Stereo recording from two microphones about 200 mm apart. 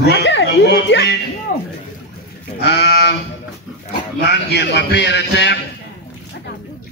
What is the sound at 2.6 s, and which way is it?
A man's voice, 60° left (ahead or behind).